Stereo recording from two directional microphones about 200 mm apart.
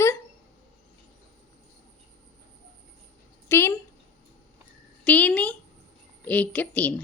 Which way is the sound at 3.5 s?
10° left (ahead or behind).